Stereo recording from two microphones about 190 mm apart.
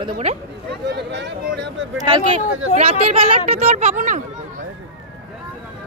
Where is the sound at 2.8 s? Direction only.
35° right (ahead or behind).